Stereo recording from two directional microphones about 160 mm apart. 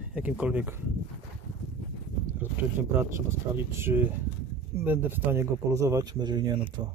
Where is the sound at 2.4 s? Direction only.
15° right (ahead or behind).